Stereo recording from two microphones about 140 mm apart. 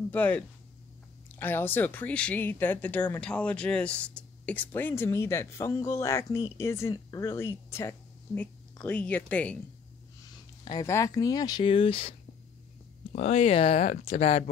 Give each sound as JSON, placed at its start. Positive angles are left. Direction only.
{"t": 0.1, "sound": "speech", "side_deg": 10}
{"t": 10.6, "sound": "speech", "side_deg": 25}
{"t": 11.6, "sound": "speech", "side_deg": 40}